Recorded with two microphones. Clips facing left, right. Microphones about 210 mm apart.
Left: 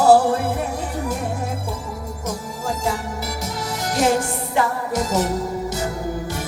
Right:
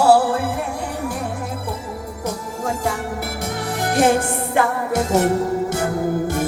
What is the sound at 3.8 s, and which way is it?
Music, 55° right (ahead or behind).